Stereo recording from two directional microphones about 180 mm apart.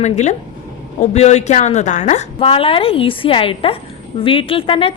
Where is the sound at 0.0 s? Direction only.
40° left (ahead or behind).